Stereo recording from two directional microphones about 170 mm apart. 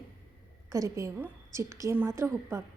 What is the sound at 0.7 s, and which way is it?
A woman's voice, 20° right (ahead or behind).